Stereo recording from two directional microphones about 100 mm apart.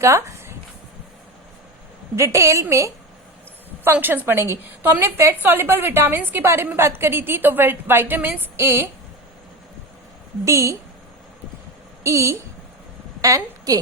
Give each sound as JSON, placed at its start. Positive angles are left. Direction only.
{"t": 0.0, "sound": "a sound", "side_deg": -30}
{"t": 2.1, "sound": "a woman's voice", "side_deg": -30}
{"t": 3.8, "sound": "a woman's voice", "side_deg": -20}
{"t": 10.4, "sound": "a woman's voice", "side_deg": -30}
{"t": 12.0, "sound": "a woman's voice", "side_deg": -30}